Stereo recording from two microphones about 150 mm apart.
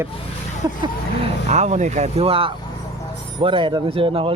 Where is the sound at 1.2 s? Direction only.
50° right (ahead or behind).